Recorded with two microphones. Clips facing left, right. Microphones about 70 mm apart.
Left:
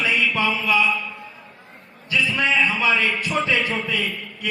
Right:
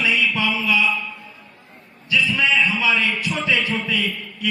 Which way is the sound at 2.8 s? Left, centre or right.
Left.